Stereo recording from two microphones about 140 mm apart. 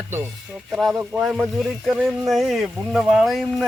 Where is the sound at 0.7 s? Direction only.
Centre (ahead or behind).